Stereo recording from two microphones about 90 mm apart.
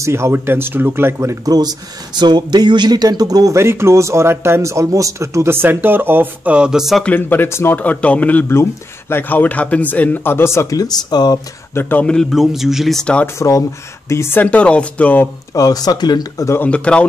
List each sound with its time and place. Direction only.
0.0 s speech: 30° right (ahead or behind)
3.5 s speech: 30° right (ahead or behind); by 7.0 s 5° right (ahead or behind)
7.2 s speech: 25° left (ahead or behind); by 11.3 s 50° left (ahead or behind)
11.7 s speech: 25° left (ahead or behind)
12.1 s a man's voice: 5° left (ahead or behind)
13.0 s speech: 15° left (ahead or behind)
13.4 s speech: 35° left (ahead or behind)
14.3 s speech: 15° left (ahead or behind)
15.5 s speech: 45° left (ahead or behind)
16.6 s speech: 15° left (ahead or behind)